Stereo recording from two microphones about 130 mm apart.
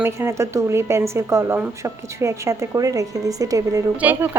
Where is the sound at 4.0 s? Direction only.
10° right (ahead or behind).